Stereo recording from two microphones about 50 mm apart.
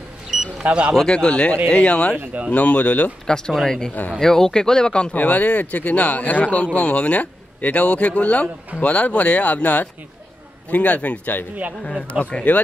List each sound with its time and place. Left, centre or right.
0.3 s vehicle: centre
0.7 s speech: right
0.9 s speech: centre
3.3 s speech: centre
5.1 s speech: left